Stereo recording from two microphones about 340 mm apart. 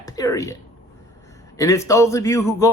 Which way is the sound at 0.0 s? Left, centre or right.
Centre.